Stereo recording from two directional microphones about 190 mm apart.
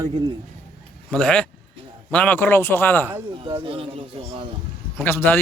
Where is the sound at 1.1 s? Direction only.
5° left (ahead or behind).